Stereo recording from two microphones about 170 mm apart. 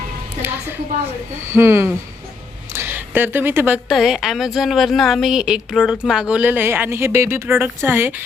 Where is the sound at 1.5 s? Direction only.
15° right (ahead or behind).